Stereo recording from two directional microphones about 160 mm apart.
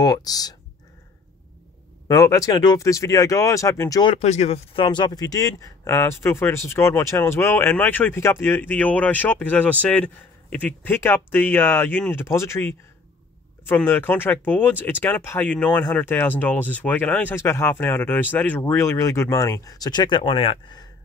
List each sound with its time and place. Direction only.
0.0 s speech: 25° left (ahead or behind)
2.0 s speech: 20° left (ahead or behind)
4.0 s speech: 40° left (ahead or behind)